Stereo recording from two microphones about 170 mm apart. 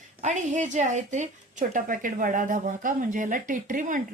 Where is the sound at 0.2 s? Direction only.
45° right (ahead or behind).